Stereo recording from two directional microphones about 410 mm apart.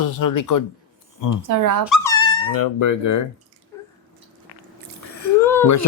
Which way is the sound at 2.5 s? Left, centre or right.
Left.